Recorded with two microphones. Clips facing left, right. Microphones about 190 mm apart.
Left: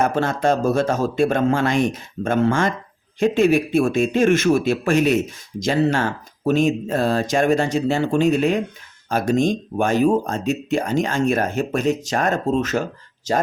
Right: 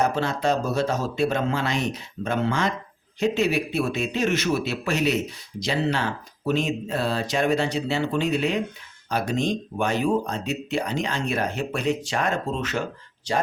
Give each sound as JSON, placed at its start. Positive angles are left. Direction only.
{"t": 0.0, "sound": "speech", "side_deg": 50}